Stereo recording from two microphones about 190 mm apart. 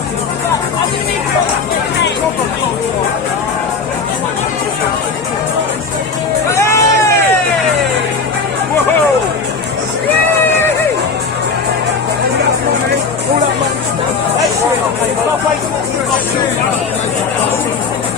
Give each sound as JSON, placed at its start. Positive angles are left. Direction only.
{"t": 6.5, "sound": "crowd", "side_deg": 15}